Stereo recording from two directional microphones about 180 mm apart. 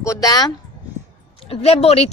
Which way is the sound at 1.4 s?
35° left (ahead or behind).